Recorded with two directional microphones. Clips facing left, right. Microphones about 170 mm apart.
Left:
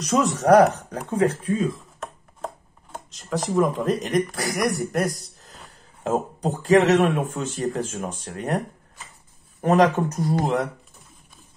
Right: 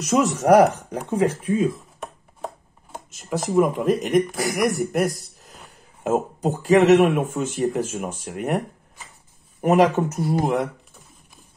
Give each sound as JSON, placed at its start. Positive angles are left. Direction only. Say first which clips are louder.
{"t": 0.0, "sound": "speech", "louder": "right 1 dB", "side_deg": -5}
{"t": 2.0, "sound": "a sound", "louder": "even", "side_deg": -5}
{"t": 4.5, "sound": "speech", "louder": "right 2 dB", "side_deg": 0}